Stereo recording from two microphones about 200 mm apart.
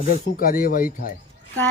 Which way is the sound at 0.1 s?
45° left (ahead or behind).